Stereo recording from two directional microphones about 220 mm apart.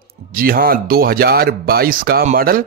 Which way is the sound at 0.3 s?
40° right (ahead or behind).